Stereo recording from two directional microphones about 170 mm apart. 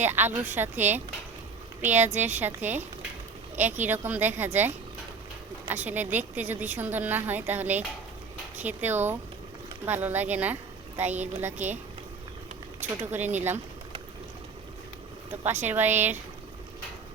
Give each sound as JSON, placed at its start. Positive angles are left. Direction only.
{"t": 0.0, "sound": "a woman's voice", "side_deg": -10}
{"t": 13.0, "sound": "a woman's voice", "side_deg": -10}
{"t": 15.6, "sound": "a woman's voice", "side_deg": -10}